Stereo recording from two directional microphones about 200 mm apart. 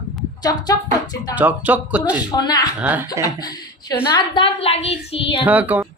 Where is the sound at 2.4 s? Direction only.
20° left (ahead or behind).